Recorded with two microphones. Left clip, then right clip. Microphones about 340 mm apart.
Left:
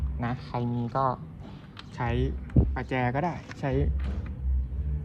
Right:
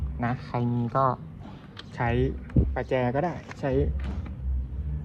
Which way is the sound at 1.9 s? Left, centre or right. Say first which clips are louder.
Right 4 dB; centre.